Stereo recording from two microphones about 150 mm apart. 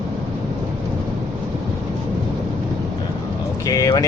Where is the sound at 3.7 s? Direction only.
25° left (ahead or behind).